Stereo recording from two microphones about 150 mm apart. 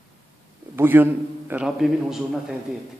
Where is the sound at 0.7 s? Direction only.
15° right (ahead or behind).